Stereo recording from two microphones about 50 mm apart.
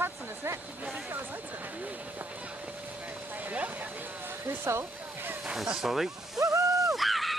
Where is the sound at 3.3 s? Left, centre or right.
Right.